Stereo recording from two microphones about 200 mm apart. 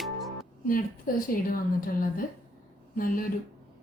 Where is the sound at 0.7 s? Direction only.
45° left (ahead or behind).